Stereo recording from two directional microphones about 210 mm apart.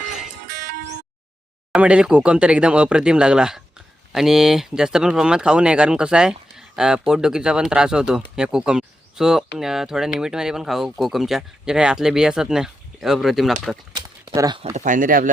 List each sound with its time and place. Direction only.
0.0 s music: centre (ahead or behind)
0.4 s music: 50° right (ahead or behind)
1.7 s speech: 5° right (ahead or behind)
13.9 s a sound: 20° right (ahead or behind)
14.8 s speech: 40° right (ahead or behind)